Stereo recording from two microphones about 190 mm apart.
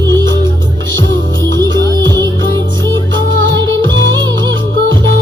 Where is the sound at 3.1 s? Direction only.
75° right (ahead or behind).